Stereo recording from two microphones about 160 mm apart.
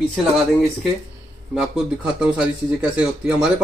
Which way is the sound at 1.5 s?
5° right (ahead or behind).